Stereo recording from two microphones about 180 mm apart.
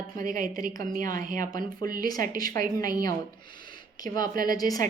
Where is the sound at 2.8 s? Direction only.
20° left (ahead or behind).